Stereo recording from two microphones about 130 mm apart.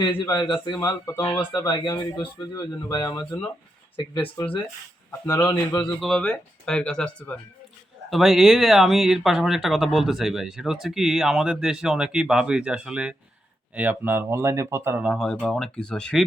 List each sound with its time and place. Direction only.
0.0 s a man's voice: 35° left (ahead or behind)
5.2 s a man's voice: 30° left (ahead or behind)
6.0 s speech: 5° left (ahead or behind)
8.1 s speech: centre (ahead or behind); by 15.0 s 20° right (ahead or behind)
15.0 s speech: centre (ahead or behind)